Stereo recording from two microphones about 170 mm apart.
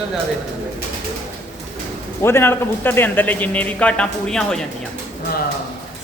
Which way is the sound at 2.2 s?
15° left (ahead or behind).